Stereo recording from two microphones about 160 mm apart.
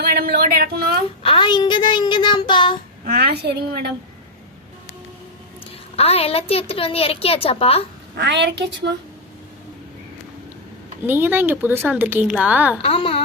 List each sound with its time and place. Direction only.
0.0 s speech: 75° right (ahead or behind)
1.2 s a child's voice: 30° left (ahead or behind)
3.3 s a woman's voice: 90° right
6.0 s a woman's voice: 40° left (ahead or behind)
8.1 s a woman's voice: 90° right
11.0 s speech: 15° right (ahead or behind)
12.8 s a woman's voice: 35° left (ahead or behind)